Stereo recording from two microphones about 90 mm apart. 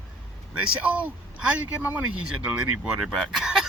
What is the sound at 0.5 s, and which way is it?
Speech, 15° right (ahead or behind).